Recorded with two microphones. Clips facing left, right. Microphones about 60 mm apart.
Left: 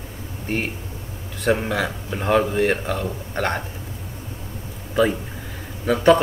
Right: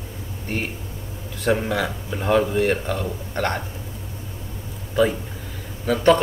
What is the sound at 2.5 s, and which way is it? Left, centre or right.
Speech, centre.